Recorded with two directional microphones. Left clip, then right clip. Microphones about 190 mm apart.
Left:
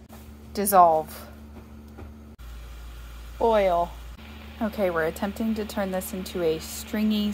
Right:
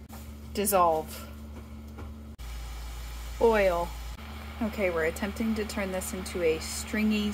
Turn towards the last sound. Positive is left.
turn(degrees=15)  # may be behind; listen again after turning